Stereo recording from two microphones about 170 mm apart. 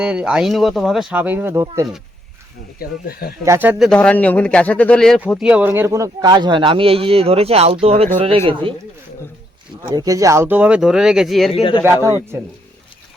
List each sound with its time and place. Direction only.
0.0 s speech: 5° right (ahead or behind)
2.7 s speech: 60° left (ahead or behind)
3.4 s speech: 15° right (ahead or behind)
3.8 s a man's voice: 5° left (ahead or behind)
5.4 s speech: 5° right (ahead or behind); by 8.7 s 30° right (ahead or behind)
9.9 s speech: 20° right (ahead or behind); by 11.5 s centre (ahead or behind)
11.5 s speech: 30° left (ahead or behind)
12.0 s speech: 15° right (ahead or behind)